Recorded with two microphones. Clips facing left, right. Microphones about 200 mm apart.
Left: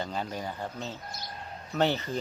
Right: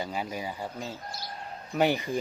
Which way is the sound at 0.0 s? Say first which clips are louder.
Right 1 dB; 10° right (ahead or behind).